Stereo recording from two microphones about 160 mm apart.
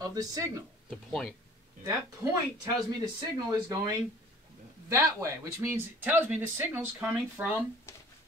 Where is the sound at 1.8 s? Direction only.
25° right (ahead or behind).